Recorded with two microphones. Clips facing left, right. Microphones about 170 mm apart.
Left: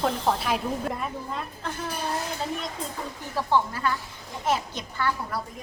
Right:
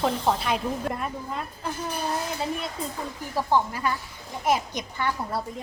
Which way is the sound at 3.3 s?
15° right (ahead or behind).